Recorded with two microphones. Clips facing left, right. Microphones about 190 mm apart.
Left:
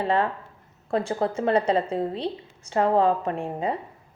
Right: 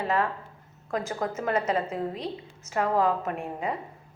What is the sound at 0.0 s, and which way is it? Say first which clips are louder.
A woman's voice: left 3 dB; 30° left (ahead or behind).